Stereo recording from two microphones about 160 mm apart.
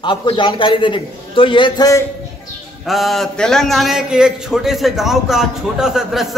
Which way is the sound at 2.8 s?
Centre (ahead or behind).